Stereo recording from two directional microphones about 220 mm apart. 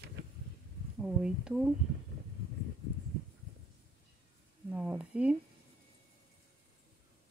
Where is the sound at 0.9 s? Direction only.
5° right (ahead or behind).